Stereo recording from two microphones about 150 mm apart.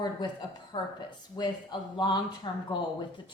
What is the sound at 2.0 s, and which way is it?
Speech, 30° left (ahead or behind).